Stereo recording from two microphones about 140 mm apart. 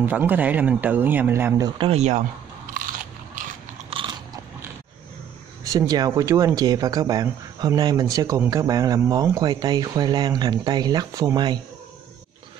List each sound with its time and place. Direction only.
0.0 s a man's voice: 15° right (ahead or behind)
1.9 s speech: 55° right (ahead or behind)
2.7 s biting: 75° right (ahead or behind)
3.9 s biting: 35° right (ahead or behind)
5.7 s speech: 30° right (ahead or behind)